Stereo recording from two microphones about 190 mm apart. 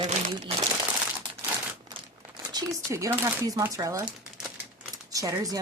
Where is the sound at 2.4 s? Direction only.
20° right (ahead or behind).